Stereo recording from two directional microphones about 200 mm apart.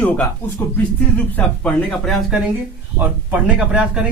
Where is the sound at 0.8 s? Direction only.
5° left (ahead or behind).